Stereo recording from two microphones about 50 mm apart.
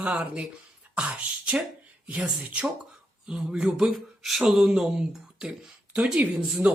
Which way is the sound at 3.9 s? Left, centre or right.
Centre.